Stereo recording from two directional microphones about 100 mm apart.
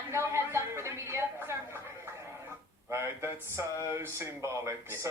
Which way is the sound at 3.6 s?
30° right (ahead or behind).